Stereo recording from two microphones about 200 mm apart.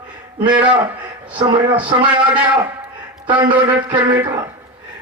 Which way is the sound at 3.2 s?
25° right (ahead or behind).